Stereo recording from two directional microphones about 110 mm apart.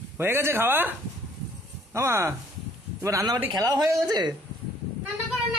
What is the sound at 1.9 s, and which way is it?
Speech, 25° right (ahead or behind).